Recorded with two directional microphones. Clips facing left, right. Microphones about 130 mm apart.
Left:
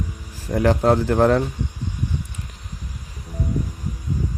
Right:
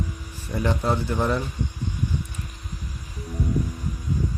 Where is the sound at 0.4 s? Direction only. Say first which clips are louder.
Left 7 dB; 90° left.